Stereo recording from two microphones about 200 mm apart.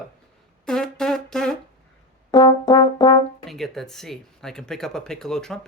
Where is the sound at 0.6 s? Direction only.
5° left (ahead or behind).